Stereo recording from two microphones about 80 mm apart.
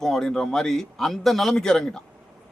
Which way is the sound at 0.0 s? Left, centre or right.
Centre.